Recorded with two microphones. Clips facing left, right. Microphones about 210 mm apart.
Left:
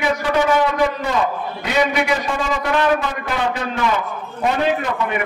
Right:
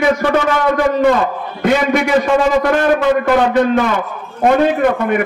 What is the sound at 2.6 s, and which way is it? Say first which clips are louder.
A man's voice: right 5 dB; 50° right (ahead or behind).